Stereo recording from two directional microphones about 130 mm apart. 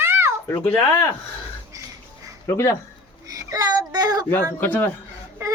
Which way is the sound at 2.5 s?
20° left (ahead or behind).